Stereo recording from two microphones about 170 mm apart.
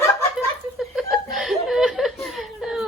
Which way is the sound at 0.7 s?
Centre (ahead or behind).